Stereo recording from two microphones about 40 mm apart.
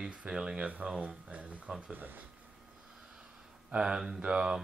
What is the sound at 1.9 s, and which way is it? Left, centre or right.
Speech, right.